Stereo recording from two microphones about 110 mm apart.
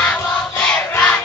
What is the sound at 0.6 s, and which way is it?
Battle cry, 10° left (ahead or behind).